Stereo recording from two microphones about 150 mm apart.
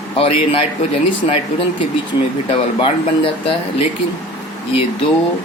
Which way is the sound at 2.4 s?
35° left (ahead or behind).